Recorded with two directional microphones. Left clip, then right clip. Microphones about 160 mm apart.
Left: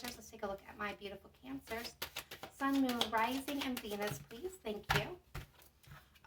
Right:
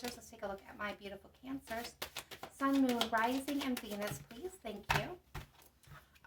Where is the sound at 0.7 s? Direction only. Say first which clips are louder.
Even; 35° right (ahead or behind).